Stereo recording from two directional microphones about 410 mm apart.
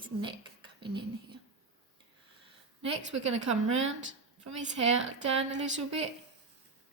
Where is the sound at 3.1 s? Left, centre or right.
Right.